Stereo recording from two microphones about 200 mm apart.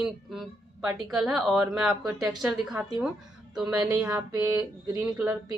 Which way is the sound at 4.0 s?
15° right (ahead or behind).